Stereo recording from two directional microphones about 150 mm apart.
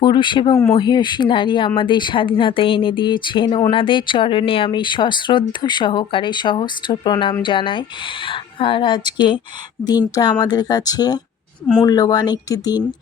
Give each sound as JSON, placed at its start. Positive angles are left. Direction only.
{"t": 0.0, "sound": "speech", "side_deg": 30}
{"t": 10.4, "sound": "speech", "side_deg": 25}